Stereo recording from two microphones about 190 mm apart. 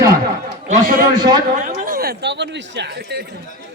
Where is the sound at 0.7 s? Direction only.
45° right (ahead or behind).